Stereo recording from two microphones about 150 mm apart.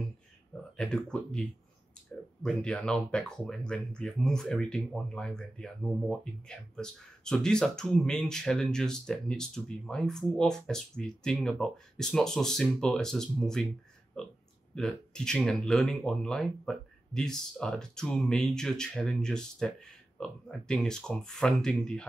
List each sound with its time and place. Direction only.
0.7 s speech: 5° left (ahead or behind)
2.4 s speech: 5° left (ahead or behind)